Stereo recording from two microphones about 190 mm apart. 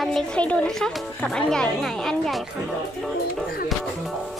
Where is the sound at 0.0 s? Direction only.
Centre (ahead or behind).